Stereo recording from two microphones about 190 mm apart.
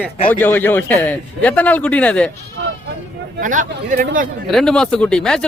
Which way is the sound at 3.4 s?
45° right (ahead or behind).